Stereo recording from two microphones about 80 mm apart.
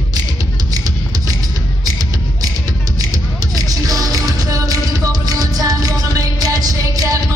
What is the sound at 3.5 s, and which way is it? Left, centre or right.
Music, right.